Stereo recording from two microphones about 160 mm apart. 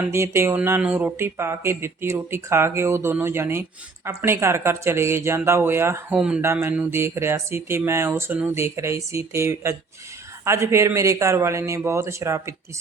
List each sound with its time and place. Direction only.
0.1 s speech: 15° right (ahead or behind)